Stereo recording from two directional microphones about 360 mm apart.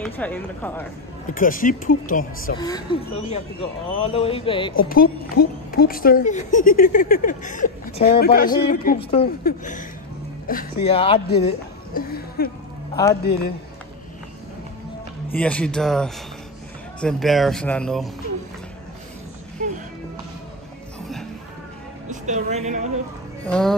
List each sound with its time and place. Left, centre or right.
0.0 s speech: centre
1.3 s a woman's voice: left
2.6 s speech: centre
4.8 s a woman's voice: left
11.9 s music: left
12.9 s a man's voice: centre
13.2 s a woman's voice: left
15.3 s speech: centre
19.6 s music: centre
22.1 s speech: centre
23.4 s speech: centre